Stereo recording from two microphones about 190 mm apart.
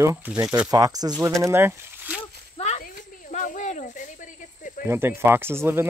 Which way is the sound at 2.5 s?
35° left (ahead or behind).